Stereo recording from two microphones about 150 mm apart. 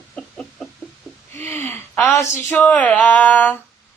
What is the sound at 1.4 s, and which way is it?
Gasp, 15° left (ahead or behind).